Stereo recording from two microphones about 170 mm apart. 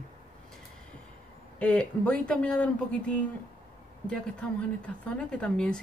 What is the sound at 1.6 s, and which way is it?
Speech, 10° left (ahead or behind).